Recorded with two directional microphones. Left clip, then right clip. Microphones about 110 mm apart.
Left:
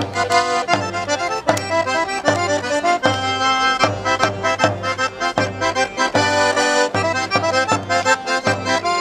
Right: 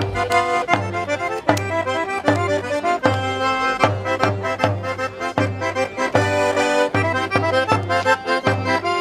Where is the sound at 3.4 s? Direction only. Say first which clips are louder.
Left 4 dB; 90° left.